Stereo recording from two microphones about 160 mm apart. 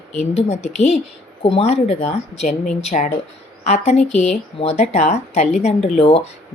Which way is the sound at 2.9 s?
50° left (ahead or behind).